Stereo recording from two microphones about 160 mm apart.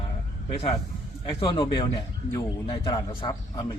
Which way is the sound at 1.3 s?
30° left (ahead or behind).